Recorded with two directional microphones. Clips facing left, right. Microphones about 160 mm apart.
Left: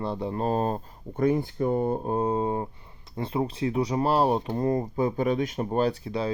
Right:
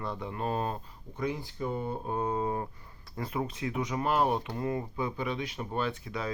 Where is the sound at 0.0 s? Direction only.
30° left (ahead or behind).